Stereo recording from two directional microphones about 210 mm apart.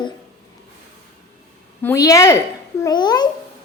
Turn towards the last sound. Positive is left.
turn(degrees=20)  # may be behind; listen again after turning